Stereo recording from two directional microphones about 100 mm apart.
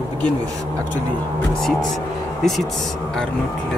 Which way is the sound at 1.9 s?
5° left (ahead or behind).